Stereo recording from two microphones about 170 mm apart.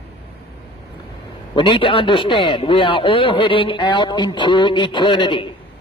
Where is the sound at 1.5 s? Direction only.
30° left (ahead or behind).